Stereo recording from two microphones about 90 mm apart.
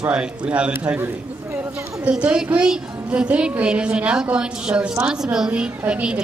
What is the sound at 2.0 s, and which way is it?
A woman's voice, 10° right (ahead or behind).